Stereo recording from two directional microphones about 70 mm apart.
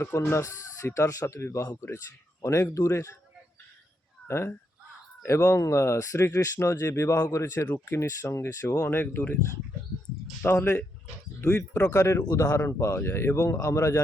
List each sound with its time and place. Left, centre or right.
0.0 s speech: left
4.3 s speech: left
10.4 s speech: left
11.9 s speech: left